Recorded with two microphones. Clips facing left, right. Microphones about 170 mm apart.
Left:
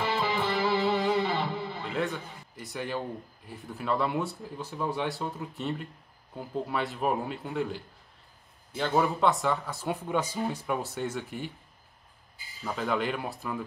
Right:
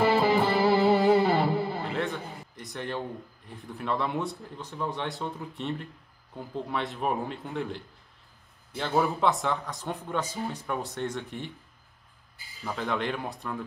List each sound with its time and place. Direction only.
0.0 s music: 50° right (ahead or behind)
1.9 s a sound: centre (ahead or behind)
2.5 s speech: 5° left (ahead or behind)
12.6 s speech: centre (ahead or behind)